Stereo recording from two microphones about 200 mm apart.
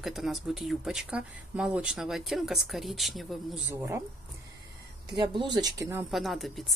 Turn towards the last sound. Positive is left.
turn(degrees=0)  # may be behind; listen again after turning